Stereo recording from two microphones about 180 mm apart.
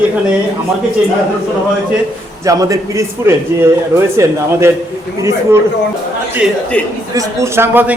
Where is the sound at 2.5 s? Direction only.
20° right (ahead or behind).